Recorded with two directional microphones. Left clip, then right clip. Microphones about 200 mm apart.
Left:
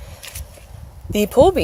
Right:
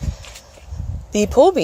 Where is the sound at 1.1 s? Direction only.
10° right (ahead or behind).